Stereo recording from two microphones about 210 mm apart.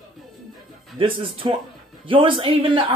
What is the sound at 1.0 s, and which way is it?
Speech, 25° right (ahead or behind).